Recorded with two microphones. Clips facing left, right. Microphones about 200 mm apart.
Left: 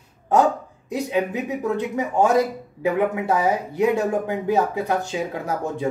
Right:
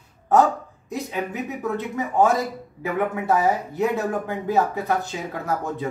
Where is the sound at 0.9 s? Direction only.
15° left (ahead or behind).